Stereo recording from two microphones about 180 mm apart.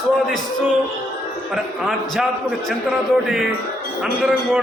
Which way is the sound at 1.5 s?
Centre (ahead or behind).